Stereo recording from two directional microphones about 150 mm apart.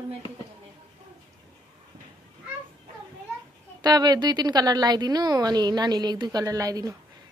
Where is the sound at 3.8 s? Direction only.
25° right (ahead or behind).